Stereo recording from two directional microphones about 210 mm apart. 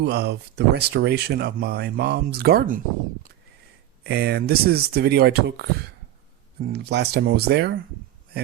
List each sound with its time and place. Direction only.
0.0 s speech: 50° right (ahead or behind)
4.0 s speech: 50° right (ahead or behind)
6.7 s speech: 50° right (ahead or behind)